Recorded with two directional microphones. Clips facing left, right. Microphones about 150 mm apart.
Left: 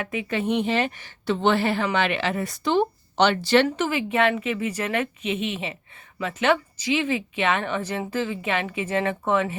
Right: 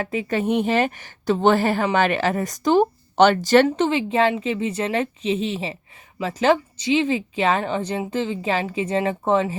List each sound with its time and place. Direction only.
0.0 s a woman's voice: 35° right (ahead or behind)
3.8 s a woman's voice: 30° right (ahead or behind)